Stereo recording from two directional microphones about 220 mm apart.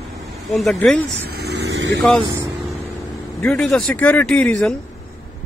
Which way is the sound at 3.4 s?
5° left (ahead or behind).